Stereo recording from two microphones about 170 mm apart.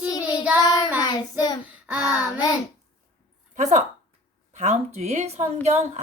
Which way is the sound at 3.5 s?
45° right (ahead or behind).